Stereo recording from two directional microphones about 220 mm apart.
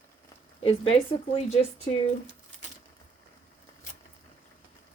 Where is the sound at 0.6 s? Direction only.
25° left (ahead or behind).